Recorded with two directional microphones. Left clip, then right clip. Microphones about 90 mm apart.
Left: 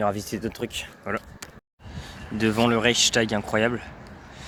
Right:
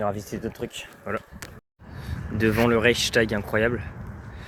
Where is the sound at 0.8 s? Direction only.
80° left.